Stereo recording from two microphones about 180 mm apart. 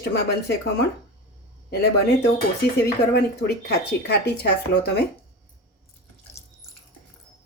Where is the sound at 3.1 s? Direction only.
65° left (ahead or behind).